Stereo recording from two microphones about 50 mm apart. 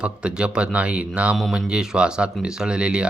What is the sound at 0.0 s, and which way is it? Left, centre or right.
Speech, right.